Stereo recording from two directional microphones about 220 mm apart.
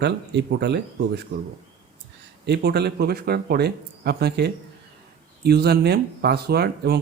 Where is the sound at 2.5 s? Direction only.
50° right (ahead or behind).